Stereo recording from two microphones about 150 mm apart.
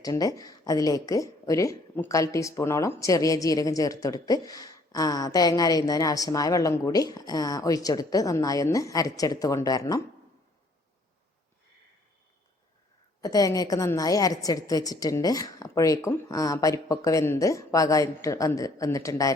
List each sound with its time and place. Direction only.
0.0 s speech: 25° left (ahead or behind)
13.2 s speech: 25° left (ahead or behind)